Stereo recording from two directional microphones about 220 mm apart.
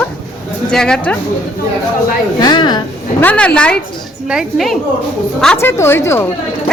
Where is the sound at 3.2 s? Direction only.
5° left (ahead or behind).